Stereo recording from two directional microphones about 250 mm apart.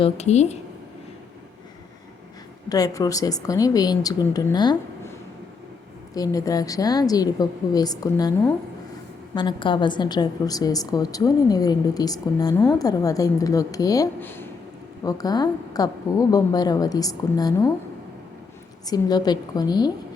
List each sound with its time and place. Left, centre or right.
0.0 s speech: left
2.6 s a woman's voice: centre
6.1 s a woman's voice: centre
18.9 s a woman's voice: centre